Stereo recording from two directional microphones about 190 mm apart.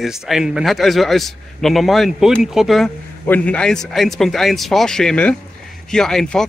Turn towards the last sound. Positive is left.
turn(degrees=0)  # may be behind; listen again after turning